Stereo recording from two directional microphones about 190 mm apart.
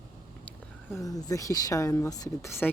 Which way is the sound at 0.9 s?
15° left (ahead or behind).